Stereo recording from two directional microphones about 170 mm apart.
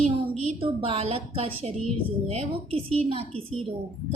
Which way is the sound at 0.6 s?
35° right (ahead or behind).